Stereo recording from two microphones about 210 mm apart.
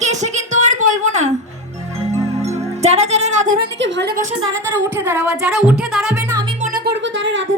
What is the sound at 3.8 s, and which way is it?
Speech, 60° right (ahead or behind).